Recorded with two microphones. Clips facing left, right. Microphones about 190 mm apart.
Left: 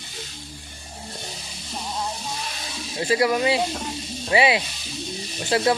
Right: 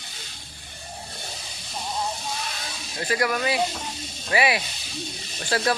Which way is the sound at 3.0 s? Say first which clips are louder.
Left 4 dB; 25° left (ahead or behind).